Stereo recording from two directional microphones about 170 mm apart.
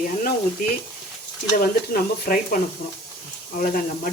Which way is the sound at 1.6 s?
55° left (ahead or behind).